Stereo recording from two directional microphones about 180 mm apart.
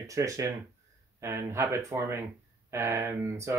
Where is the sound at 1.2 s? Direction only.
15° right (ahead or behind).